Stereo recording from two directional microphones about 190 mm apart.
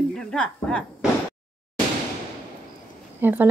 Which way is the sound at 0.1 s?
5° left (ahead or behind).